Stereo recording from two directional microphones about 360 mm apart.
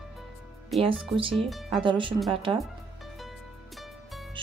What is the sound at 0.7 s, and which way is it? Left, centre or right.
Speech, centre.